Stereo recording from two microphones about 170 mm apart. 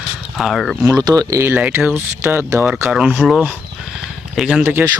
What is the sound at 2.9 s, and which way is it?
Speech, 5° right (ahead or behind).